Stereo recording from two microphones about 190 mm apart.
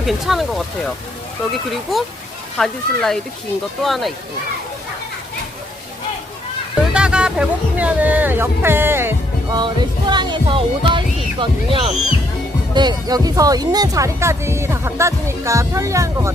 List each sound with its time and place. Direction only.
0.0 s speech: centre (ahead or behind)
6.9 s speech: 5° right (ahead or behind)
9.6 s speech: 25° right (ahead or behind)